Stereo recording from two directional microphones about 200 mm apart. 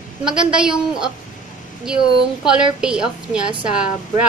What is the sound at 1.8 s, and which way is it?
A woman's voice, 5° right (ahead or behind).